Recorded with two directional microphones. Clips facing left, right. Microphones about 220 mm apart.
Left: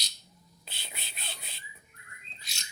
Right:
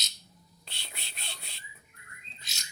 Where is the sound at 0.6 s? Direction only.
5° left (ahead or behind).